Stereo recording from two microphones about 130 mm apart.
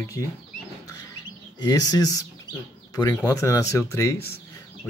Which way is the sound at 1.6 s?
30° left (ahead or behind).